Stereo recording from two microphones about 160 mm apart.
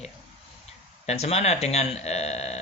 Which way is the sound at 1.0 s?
40° left (ahead or behind).